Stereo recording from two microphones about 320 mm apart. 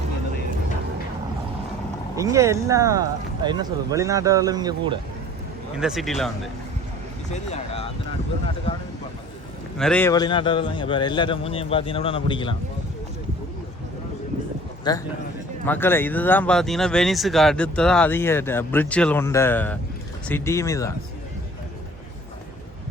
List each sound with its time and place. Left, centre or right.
2.1 s speech: centre
5.8 s speech: centre
7.5 s a man's voice: centre
9.7 s a man's voice: centre
14.9 s a man's voice: centre